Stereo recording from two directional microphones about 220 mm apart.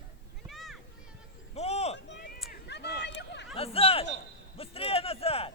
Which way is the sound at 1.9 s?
50° left (ahead or behind).